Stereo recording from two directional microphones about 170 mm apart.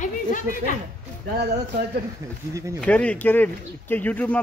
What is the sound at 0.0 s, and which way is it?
Speech, 50° left (ahead or behind).